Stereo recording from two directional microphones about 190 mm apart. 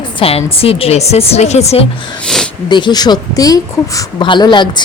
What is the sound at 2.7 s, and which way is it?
A woman's voice, 25° left (ahead or behind).